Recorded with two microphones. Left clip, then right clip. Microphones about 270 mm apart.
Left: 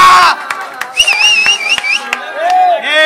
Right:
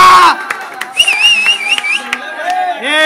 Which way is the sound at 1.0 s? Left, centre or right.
Centre.